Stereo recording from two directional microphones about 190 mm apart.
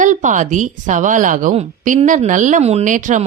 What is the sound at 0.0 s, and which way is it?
A woman's voice, 40° right (ahead or behind).